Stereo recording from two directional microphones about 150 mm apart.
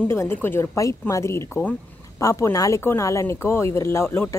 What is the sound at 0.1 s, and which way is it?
Speech, 15° left (ahead or behind).